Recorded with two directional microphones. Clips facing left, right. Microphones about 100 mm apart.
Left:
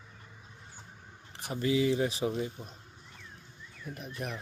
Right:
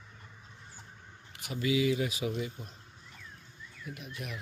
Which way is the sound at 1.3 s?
35° left (ahead or behind).